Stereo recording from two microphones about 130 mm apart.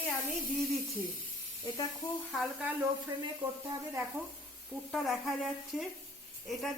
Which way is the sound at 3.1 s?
40° right (ahead or behind).